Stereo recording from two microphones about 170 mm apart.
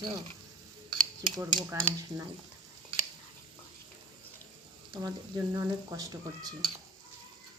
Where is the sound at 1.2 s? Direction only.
20° right (ahead or behind).